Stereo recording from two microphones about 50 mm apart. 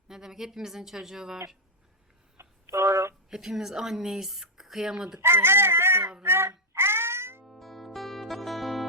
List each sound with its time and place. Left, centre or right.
0.1 s speech: centre
2.4 s a sound: right
3.2 s speech: centre
5.2 s chicken: right
6.2 s a sound: right
7.4 s music: centre